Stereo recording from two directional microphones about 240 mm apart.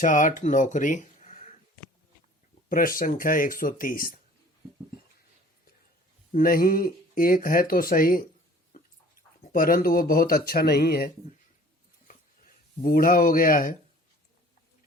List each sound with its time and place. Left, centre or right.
0.0 s speech: left
2.6 s speech: left
6.3 s speech: left
12.8 s speech: left